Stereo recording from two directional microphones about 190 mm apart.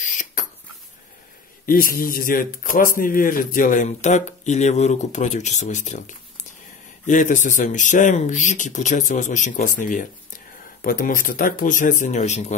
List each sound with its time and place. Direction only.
0.0 s rodents: 40° left (ahead or behind)
1.7 s a man's voice: 50° left (ahead or behind)